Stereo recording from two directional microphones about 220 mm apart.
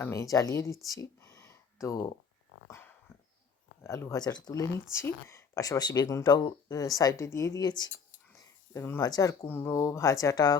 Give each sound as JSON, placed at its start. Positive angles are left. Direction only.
{"t": 0.0, "sound": "speech", "side_deg": 15}
{"t": 0.9, "sound": "a sound", "side_deg": 15}
{"t": 2.6, "sound": "dog", "side_deg": 15}
{"t": 3.8, "sound": "speech", "side_deg": 15}